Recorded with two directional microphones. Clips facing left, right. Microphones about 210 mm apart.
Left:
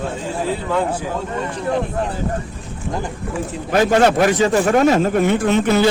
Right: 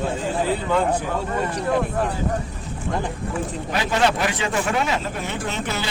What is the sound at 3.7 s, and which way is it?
A man's voice, 45° left (ahead or behind).